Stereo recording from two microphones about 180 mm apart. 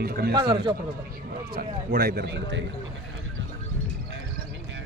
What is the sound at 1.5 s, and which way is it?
A man's voice, 55° right (ahead or behind).